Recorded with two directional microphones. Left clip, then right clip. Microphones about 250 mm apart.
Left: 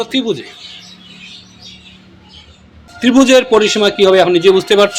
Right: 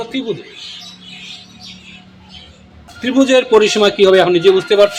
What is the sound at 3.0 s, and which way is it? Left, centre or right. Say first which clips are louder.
Speech: left 3 dB; left.